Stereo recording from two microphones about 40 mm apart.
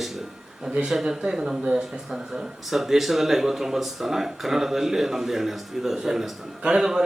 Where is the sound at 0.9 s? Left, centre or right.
Centre.